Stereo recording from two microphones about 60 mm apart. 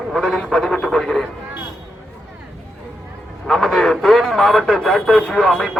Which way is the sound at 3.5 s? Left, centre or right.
Centre.